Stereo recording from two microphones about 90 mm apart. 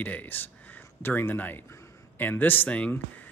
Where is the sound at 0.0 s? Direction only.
20° left (ahead or behind).